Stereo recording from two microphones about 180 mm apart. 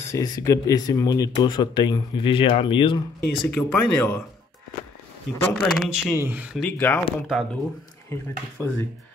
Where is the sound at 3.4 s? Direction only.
10° left (ahead or behind).